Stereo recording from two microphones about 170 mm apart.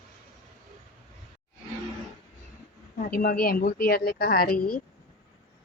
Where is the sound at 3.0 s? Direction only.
55° left (ahead or behind).